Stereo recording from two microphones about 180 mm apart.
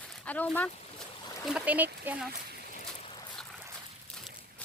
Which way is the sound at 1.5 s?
10° right (ahead or behind).